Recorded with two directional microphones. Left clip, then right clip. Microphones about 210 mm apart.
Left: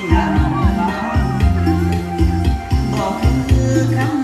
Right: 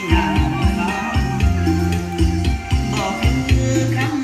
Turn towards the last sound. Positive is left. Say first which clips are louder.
# left 2 dB
turn(degrees=-10)  # may be behind; listen again after turning